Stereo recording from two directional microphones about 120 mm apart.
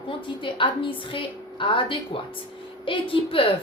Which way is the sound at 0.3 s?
45° left (ahead or behind).